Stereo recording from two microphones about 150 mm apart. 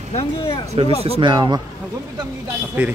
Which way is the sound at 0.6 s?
45° right (ahead or behind).